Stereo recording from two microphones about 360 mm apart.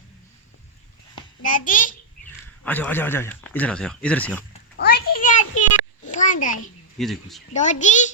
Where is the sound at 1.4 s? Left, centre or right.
Left.